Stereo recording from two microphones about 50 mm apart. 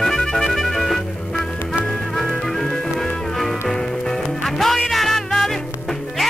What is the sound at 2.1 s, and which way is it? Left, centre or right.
Music, centre.